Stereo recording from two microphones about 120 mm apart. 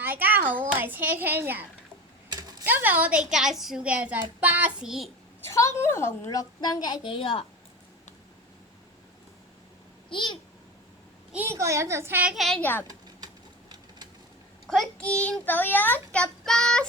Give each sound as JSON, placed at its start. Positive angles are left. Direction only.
{"t": 0.0, "sound": "a woman's voice", "side_deg": -15}
{"t": 2.3, "sound": "typing", "side_deg": -35}
{"t": 2.6, "sound": "a woman's voice", "side_deg": -15}
{"t": 5.4, "sound": "a woman's voice", "side_deg": 25}
{"t": 6.6, "sound": "a woman's voice", "side_deg": 35}
{"t": 10.1, "sound": "a child's voice", "side_deg": 40}
{"t": 11.5, "sound": "a woman's voice", "side_deg": -25}
{"t": 12.3, "sound": "a woman's voice", "side_deg": 0}
{"t": 12.9, "sound": "a sound", "side_deg": -35}
{"t": 14.7, "sound": "a child's voice", "side_deg": 5}